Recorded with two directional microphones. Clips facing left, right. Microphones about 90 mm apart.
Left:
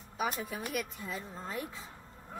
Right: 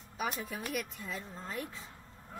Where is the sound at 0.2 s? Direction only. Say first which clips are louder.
Left 2 dB; 5° left (ahead or behind).